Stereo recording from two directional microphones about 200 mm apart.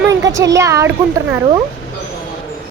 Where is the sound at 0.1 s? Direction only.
15° right (ahead or behind).